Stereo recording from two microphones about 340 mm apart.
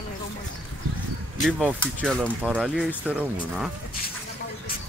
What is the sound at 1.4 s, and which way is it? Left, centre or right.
Speech, centre.